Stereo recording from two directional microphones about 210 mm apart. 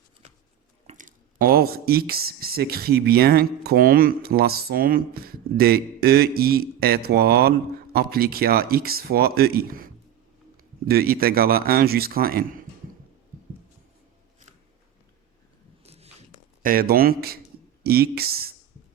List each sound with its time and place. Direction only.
0.9 s speech: 40° right (ahead or behind)
15.8 s biting: 30° right (ahead or behind)
16.6 s speech: 45° right (ahead or behind)